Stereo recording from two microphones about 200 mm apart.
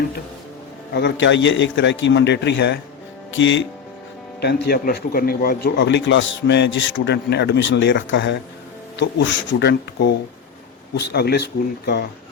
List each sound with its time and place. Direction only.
0.9 s speech: 60° left (ahead or behind)
4.4 s speech: 55° left (ahead or behind)